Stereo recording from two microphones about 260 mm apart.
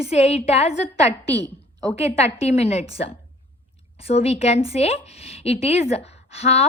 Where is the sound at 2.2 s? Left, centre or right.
Left.